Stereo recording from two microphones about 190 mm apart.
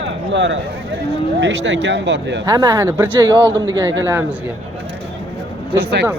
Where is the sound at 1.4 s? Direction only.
70° right (ahead or behind).